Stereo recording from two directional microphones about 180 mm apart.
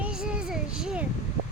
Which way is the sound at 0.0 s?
5° right (ahead or behind).